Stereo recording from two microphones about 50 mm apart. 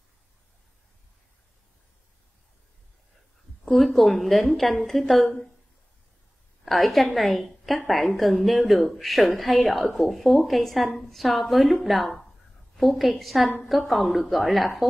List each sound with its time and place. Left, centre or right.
3.6 s a woman's voice: centre
6.6 s a woman's voice: centre